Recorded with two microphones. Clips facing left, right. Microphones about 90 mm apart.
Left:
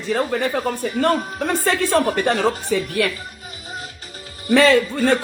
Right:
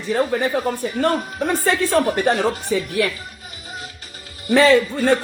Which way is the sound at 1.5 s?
90° left.